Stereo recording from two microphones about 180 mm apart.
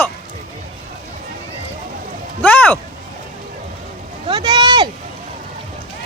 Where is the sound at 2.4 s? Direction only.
10° left (ahead or behind).